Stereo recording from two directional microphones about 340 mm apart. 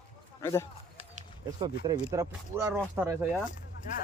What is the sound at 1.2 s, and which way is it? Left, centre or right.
Speech, centre.